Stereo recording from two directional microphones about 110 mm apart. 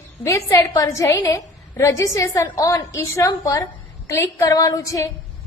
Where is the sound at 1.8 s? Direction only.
30° left (ahead or behind).